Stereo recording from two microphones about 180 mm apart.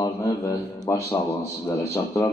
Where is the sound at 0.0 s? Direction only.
15° left (ahead or behind).